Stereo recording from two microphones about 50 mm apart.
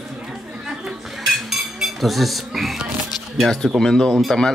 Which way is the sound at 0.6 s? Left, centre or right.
Centre.